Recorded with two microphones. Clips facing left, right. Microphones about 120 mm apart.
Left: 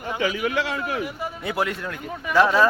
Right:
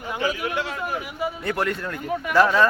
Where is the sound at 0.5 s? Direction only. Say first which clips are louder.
Left 2 dB; 90° left.